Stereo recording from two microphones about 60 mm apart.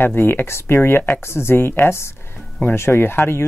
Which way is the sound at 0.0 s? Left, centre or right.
Left.